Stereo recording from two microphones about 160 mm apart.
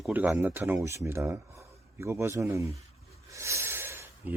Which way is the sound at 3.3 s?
20° right (ahead or behind).